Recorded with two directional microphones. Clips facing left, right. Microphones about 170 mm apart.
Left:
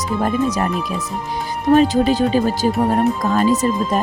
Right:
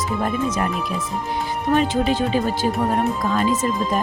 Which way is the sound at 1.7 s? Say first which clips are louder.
Left 5 dB; 40° left (ahead or behind).